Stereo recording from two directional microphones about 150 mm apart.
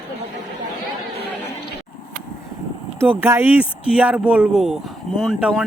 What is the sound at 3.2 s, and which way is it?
Speech, 15° right (ahead or behind).